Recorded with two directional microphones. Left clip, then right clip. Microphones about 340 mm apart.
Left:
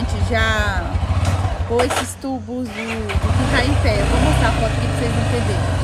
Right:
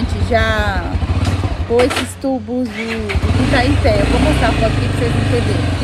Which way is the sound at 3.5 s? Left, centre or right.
Centre.